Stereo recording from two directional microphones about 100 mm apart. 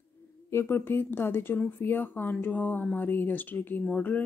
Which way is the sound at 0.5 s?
25° left (ahead or behind).